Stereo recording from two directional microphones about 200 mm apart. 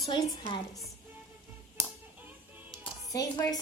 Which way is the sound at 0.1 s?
20° left (ahead or behind).